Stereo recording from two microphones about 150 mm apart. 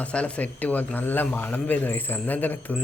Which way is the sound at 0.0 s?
10° left (ahead or behind).